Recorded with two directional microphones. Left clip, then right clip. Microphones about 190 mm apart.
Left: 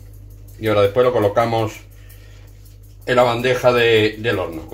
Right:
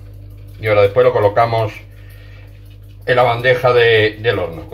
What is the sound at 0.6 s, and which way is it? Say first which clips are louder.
Speech: right 4 dB; 25° left (ahead or behind).